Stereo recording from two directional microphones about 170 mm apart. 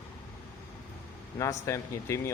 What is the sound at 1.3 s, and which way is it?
Speech, 20° left (ahead or behind).